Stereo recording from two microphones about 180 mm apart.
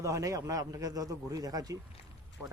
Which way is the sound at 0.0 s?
15° right (ahead or behind).